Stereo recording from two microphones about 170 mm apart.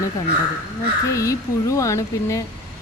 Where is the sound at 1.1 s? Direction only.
20° left (ahead or behind).